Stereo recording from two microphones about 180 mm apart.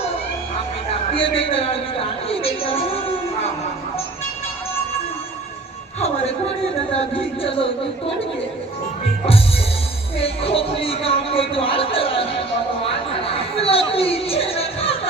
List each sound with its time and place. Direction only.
1.1 s a woman's voice: 30° left (ahead or behind)
6.9 s speech: 30° left (ahead or behind)
10.2 s speech: 30° left (ahead or behind)